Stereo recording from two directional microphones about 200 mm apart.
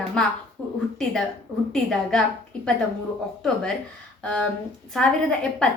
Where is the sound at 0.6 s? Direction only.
5° left (ahead or behind).